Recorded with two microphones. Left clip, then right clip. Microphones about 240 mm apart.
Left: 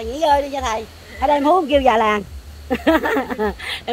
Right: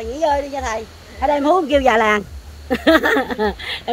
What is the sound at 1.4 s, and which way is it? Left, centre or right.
Speech, centre.